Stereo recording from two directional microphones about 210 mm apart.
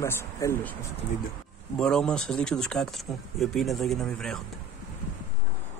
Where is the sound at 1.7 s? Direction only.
5° left (ahead or behind).